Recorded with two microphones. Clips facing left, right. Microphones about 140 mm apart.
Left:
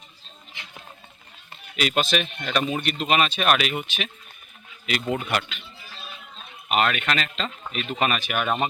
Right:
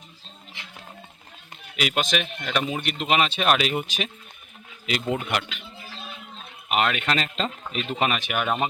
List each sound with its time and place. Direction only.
1.7 s speech: 10° right (ahead or behind); by 4.1 s 35° right (ahead or behind)
4.9 s speech: 25° right (ahead or behind)
5.2 s speech: 15° right (ahead or behind)
6.7 s speech: 15° right (ahead or behind)
7.1 s speech: 35° right (ahead or behind); by 8.6 s 15° right (ahead or behind)